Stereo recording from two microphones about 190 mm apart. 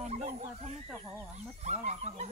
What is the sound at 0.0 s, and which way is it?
Speech, 35° right (ahead or behind).